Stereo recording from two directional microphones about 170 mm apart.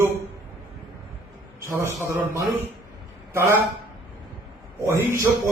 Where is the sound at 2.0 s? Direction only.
15° right (ahead or behind).